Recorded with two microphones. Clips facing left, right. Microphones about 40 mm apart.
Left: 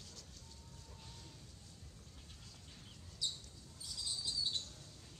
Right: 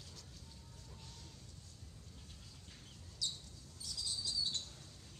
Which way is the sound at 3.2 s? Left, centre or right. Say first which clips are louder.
Even; left.